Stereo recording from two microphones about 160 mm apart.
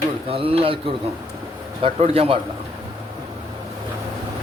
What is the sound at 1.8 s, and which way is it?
Speech, 35° right (ahead or behind).